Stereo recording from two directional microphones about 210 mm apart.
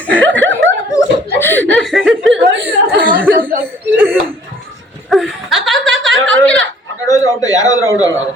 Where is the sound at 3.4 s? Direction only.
40° right (ahead or behind).